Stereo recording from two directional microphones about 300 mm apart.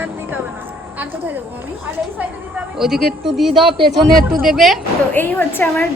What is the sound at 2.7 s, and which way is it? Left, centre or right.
Speech, centre.